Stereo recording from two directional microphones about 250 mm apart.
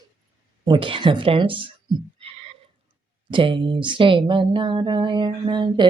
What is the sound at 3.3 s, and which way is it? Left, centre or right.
Speech, centre.